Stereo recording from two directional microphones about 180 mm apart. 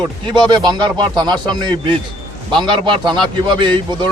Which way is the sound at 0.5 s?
25° right (ahead or behind).